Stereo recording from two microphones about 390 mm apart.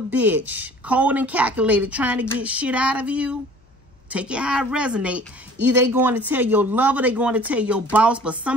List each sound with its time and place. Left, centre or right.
0.1 s a woman's voice: centre